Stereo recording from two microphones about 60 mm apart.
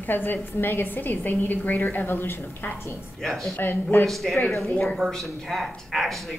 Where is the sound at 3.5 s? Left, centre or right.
Left.